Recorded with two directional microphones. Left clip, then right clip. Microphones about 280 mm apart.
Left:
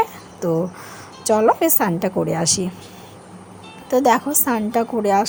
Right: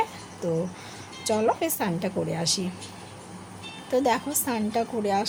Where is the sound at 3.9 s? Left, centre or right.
Left.